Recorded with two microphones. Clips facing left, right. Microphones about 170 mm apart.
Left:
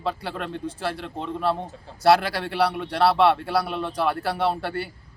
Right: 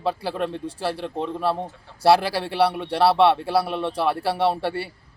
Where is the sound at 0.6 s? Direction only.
35° right (ahead or behind).